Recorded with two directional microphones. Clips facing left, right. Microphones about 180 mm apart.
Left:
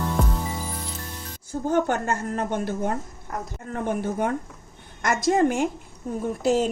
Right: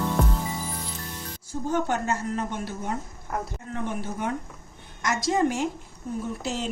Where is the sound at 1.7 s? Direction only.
55° left (ahead or behind).